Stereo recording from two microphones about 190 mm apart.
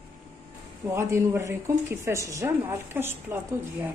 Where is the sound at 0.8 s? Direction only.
15° right (ahead or behind).